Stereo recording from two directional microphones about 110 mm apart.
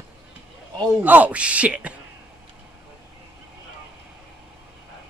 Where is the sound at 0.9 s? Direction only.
15° right (ahead or behind).